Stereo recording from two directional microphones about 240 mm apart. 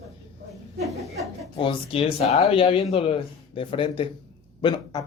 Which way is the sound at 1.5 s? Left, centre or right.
Left.